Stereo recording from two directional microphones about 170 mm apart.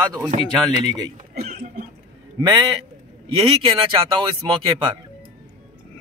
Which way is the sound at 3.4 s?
30° right (ahead or behind).